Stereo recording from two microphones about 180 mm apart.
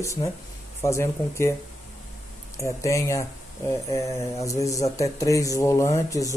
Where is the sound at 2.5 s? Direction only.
15° left (ahead or behind).